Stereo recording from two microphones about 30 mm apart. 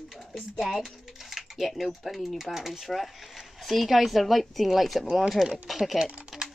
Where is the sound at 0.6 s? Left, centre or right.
Centre.